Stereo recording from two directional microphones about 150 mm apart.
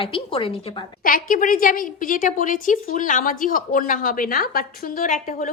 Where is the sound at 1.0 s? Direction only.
65° left (ahead or behind).